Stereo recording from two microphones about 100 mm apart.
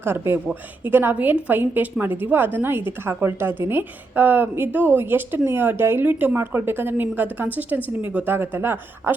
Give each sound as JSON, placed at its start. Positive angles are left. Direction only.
{"t": 0.0, "sound": "a woman's voice", "side_deg": -25}